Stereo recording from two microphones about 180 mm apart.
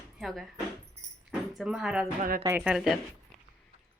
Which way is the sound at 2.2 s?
55° right (ahead or behind).